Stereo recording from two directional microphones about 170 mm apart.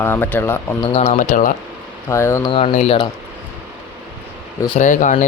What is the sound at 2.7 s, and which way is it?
Speech, 40° left (ahead or behind).